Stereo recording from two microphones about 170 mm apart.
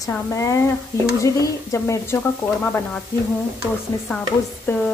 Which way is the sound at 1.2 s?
20° left (ahead or behind).